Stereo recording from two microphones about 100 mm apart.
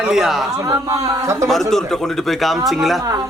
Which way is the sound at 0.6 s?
35° right (ahead or behind).